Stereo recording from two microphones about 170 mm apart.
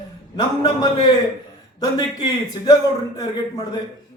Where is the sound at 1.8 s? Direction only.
25° left (ahead or behind).